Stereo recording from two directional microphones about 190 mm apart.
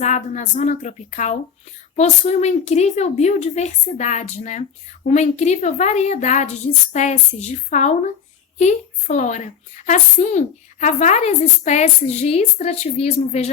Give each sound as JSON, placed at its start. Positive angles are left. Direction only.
{"t": 0.0, "sound": "a woman's voice", "side_deg": 40}